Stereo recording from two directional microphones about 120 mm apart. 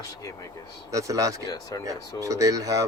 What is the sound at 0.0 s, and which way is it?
Speech, 25° left (ahead or behind).